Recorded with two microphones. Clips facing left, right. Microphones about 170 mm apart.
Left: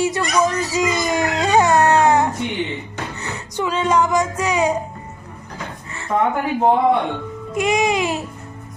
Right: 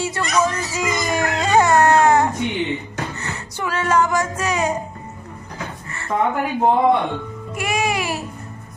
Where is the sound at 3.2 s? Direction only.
15° left (ahead or behind).